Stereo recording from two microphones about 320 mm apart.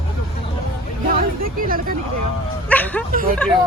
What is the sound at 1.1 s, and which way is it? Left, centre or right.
Speech, right.